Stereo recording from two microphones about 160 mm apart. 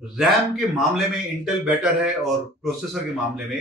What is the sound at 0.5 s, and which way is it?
Speech, centre (ahead or behind).